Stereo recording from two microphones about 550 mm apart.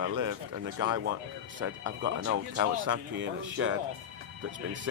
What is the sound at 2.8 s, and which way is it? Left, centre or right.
Speech, right.